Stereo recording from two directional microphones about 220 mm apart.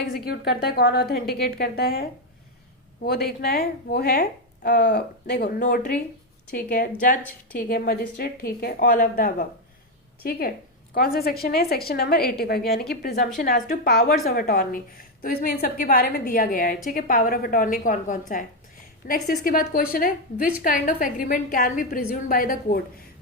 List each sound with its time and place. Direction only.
0.1 s a woman's voice: 45° left (ahead or behind)
7.2 s a woman's voice: 5° left (ahead or behind)
7.7 s a woman's voice: 45° left (ahead or behind)